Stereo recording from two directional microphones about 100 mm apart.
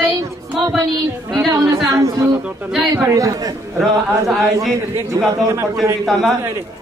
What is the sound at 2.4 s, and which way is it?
Speech, 5° right (ahead or behind).